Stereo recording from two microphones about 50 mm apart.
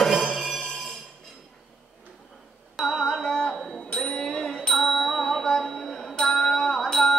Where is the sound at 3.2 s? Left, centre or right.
Centre.